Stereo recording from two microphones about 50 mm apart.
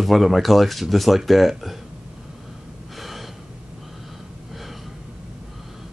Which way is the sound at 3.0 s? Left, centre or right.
Centre.